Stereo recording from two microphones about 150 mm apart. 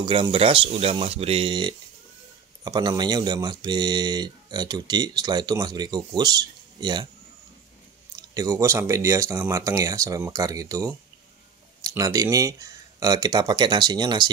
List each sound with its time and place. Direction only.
0.0 s speech: 35° right (ahead or behind)
8.2 s speech: 25° right (ahead or behind)